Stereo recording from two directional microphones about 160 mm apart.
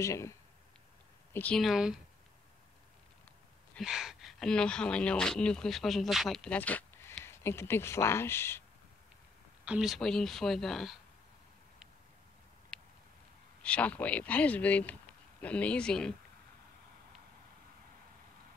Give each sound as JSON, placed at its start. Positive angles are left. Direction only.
{"t": 0.0, "sound": "speech", "side_deg": 20}
{"t": 1.3, "sound": "speech", "side_deg": 10}
{"t": 3.7, "sound": "speech", "side_deg": 0}
{"t": 9.7, "sound": "speech", "side_deg": 0}
{"t": 12.7, "sound": "a sound", "side_deg": 5}
{"t": 13.6, "sound": "speech", "side_deg": 10}